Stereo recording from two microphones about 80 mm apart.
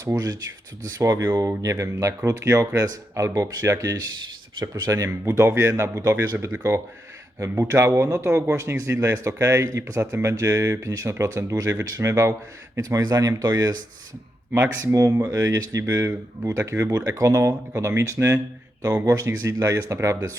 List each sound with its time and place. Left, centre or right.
0.0 s speech: right
14.9 s speech: right